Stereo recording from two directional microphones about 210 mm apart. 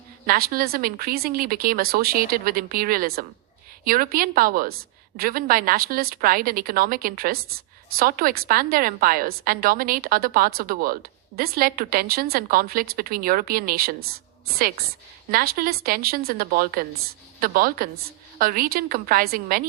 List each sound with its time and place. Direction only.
0.3 s a woman's voice: 45° right (ahead or behind)